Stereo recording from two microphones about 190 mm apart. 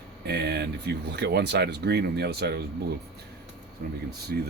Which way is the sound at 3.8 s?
50° right (ahead or behind).